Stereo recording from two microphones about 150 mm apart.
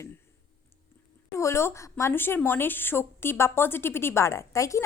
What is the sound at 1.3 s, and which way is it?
A woman's voice, 20° left (ahead or behind).